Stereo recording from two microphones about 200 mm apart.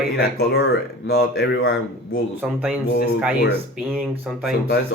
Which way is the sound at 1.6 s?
80° left.